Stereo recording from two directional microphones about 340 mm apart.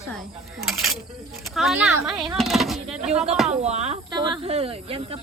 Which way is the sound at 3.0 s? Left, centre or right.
Centre.